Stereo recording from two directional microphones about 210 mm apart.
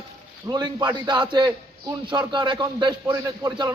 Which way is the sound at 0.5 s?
20° right (ahead or behind).